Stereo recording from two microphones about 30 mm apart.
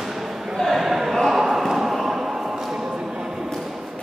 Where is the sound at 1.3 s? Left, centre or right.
Centre.